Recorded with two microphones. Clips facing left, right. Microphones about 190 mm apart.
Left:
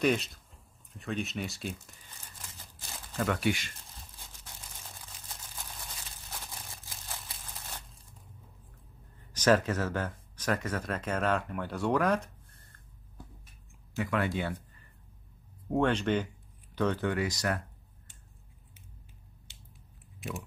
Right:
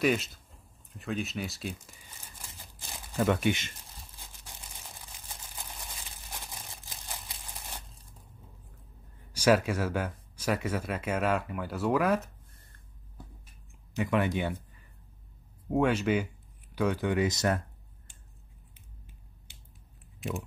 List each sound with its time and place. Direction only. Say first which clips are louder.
0.0 s speech: right 1 dB; centre (ahead or behind); by 3.7 s 20° right (ahead or behind)
5.6 s a sound: right 1 dB; 15° right (ahead or behind)
9.3 s speech: right 1 dB; 10° right (ahead or behind)
13.9 s speech: right 3 dB; 20° right (ahead or behind)
15.7 s speech: right 1 dB; 10° right (ahead or behind); by 17.6 s 25° right (ahead or behind)